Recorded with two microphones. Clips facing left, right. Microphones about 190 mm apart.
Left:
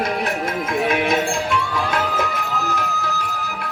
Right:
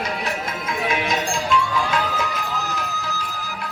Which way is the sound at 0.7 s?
55° left (ahead or behind).